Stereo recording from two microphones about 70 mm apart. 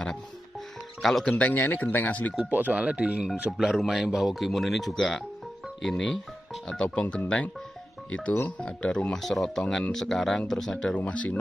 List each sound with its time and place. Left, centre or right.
1.0 s speech: centre
1.4 s speech: left
2.5 s speech: right
3.5 s speech: centre
9.1 s speech: centre; by 11.3 s left